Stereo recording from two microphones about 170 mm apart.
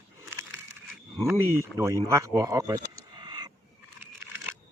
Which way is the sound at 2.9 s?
25° right (ahead or behind).